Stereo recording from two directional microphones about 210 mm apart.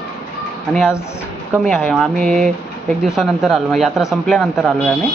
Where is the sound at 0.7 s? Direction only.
Centre (ahead or behind).